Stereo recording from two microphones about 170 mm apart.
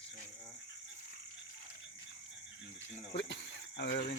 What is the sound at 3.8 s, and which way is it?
Speech, 70° left (ahead or behind).